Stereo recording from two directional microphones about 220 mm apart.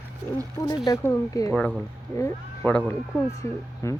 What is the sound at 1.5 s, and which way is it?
A man's voice, centre (ahead or behind).